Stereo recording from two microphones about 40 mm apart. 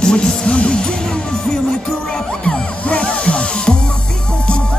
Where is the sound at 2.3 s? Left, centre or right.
Left.